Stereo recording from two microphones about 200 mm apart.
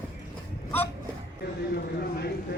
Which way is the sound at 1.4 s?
55° left (ahead or behind).